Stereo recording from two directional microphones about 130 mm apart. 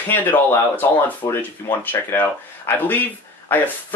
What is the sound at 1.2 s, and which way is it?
Speech, 30° left (ahead or behind).